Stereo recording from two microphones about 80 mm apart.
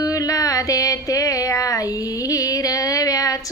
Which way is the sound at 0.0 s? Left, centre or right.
Left.